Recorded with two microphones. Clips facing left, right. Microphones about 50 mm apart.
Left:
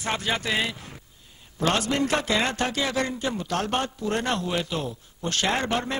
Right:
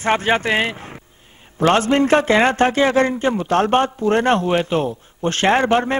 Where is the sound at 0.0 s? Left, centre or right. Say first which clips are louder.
Right 10 dB; right.